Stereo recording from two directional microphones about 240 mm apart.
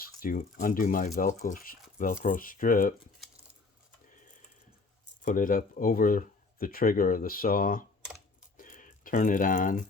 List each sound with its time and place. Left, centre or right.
0.0 s speech: left
5.2 s speech: left
8.5 s a sound: left